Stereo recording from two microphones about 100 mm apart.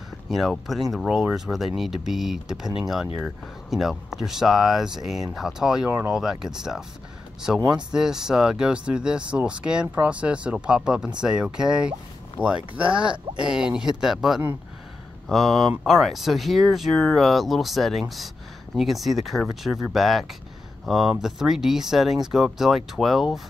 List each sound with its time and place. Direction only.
0.3 s speech: centre (ahead or behind)
5.9 s speech: 15° right (ahead or behind)
6.4 s speech: 5° right (ahead or behind)